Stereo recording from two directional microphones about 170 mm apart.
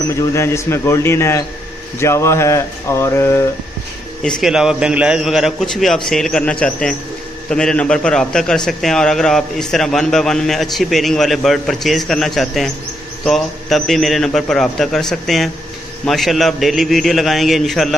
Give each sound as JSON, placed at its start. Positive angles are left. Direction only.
{"t": 0.1, "sound": "speech", "side_deg": 15}
{"t": 4.2, "sound": "a man's voice", "side_deg": 0}